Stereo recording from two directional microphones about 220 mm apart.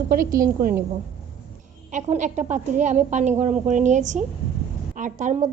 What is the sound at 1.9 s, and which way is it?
A woman's voice, 35° right (ahead or behind).